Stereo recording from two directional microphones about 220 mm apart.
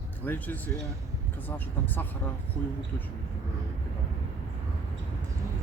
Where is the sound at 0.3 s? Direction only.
10° left (ahead or behind).